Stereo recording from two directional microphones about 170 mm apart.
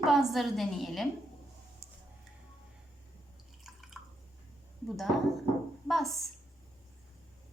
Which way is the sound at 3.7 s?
Centre (ahead or behind).